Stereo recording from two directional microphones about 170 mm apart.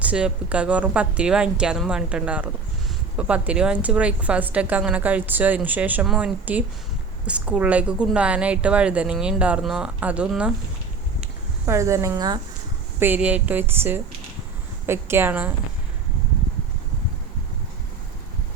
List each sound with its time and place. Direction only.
0.0 s a woman's voice: 5° right (ahead or behind)
11.6 s a woman's voice: 15° right (ahead or behind)
13.0 s a woman's voice: 10° right (ahead or behind)